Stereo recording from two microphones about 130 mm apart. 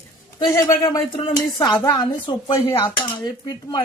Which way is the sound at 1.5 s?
30° left (ahead or behind).